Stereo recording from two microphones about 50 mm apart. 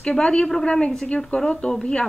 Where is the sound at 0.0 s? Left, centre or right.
Centre.